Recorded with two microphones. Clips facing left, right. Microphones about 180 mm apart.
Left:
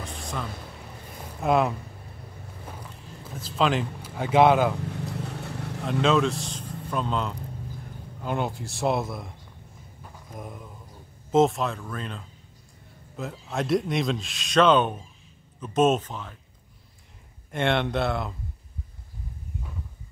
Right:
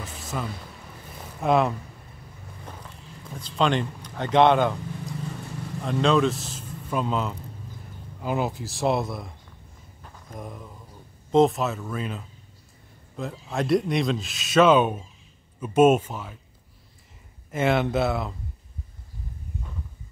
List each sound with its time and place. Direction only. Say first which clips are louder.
0.0 s a sound: right 1 dB; 5° right (ahead or behind)
1.4 s speech: right 1 dB; centre (ahead or behind)
3.3 s speech: right 1 dB; 5° left (ahead or behind)
5.1 s vehicle: even; 70° left (ahead or behind)
5.9 s speech: right 1 dB; centre (ahead or behind)
10.3 s speech: right 2 dB; 5° left (ahead or behind)
17.5 s speech: right 2 dB; 5° right (ahead or behind)